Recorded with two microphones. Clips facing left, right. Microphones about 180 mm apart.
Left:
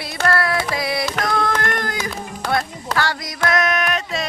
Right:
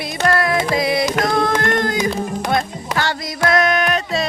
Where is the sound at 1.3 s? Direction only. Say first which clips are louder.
Right 3 dB; 25° right (ahead or behind).